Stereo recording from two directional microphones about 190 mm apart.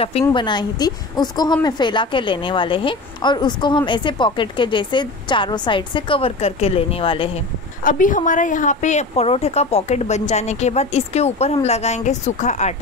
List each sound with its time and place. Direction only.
0.2 s a woman's voice: 25° left (ahead or behind)
7.8 s speech: 45° left (ahead or behind)